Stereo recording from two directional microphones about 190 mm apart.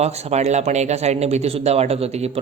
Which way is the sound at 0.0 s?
35° right (ahead or behind).